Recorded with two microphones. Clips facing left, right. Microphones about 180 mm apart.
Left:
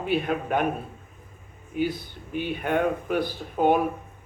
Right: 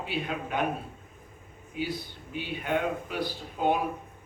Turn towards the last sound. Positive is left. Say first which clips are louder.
# left 6 dB
turn(degrees=50)  # may be behind; listen again after turning